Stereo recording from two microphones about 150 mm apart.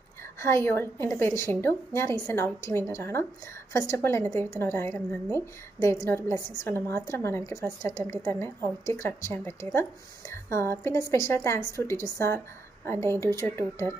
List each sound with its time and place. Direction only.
0.4 s a woman's voice: 15° left (ahead or behind)